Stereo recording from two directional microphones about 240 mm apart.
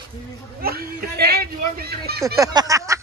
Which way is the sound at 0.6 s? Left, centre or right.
Right.